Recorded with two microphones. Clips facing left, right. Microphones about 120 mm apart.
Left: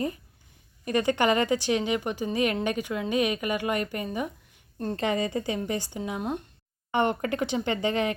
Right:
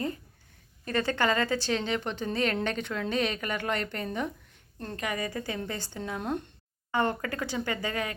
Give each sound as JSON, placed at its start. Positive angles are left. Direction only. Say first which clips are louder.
{"t": 0.9, "sound": "a woman's voice", "louder": "left 4 dB", "side_deg": 15}
{"t": 4.9, "sound": "a woman's voice", "louder": "left 5 dB", "side_deg": 25}
{"t": 6.9, "sound": "speech", "louder": "left 3 dB", "side_deg": 20}